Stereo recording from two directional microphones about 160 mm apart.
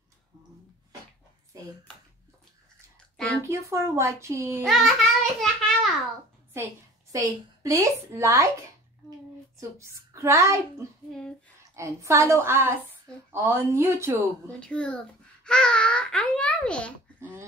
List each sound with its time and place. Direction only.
3.4 s speech: 20° right (ahead or behind)
4.6 s a sound: centre (ahead or behind)
6.5 s a woman's voice: 20° right (ahead or behind)
9.6 s a child's voice: 20° right (ahead or behind)
14.6 s a child's voice: 5° left (ahead or behind)